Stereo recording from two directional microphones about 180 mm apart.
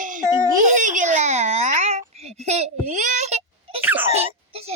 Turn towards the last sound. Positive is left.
turn(degrees=-35)  # may be behind; listen again after turning